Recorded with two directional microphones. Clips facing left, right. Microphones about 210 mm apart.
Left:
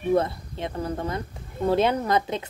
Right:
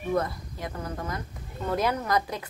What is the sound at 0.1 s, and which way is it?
Speech, 30° left (ahead or behind).